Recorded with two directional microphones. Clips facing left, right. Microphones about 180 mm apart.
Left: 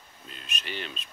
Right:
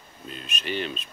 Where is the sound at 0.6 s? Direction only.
20° right (ahead or behind).